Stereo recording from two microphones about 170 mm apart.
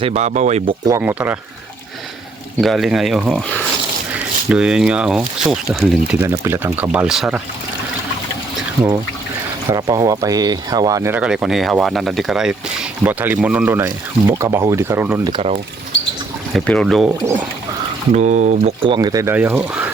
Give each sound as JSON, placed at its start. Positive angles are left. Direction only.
{"t": 0.0, "sound": "speech", "side_deg": -40}
{"t": 0.9, "sound": "speech", "side_deg": -15}
{"t": 2.6, "sound": "speech", "side_deg": 0}
{"t": 9.6, "sound": "speech", "side_deg": -20}
{"t": 15.3, "sound": "speech", "side_deg": -35}
{"t": 16.6, "sound": "speech", "side_deg": 5}
{"t": 18.1, "sound": "speech", "side_deg": -45}
{"t": 18.8, "sound": "speech", "side_deg": -25}